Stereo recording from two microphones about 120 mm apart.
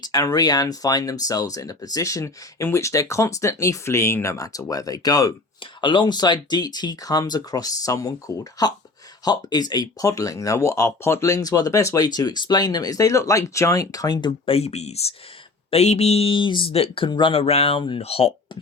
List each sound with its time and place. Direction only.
0.0 s speech: 30° left (ahead or behind)
14.5 s speech: 60° left (ahead or behind)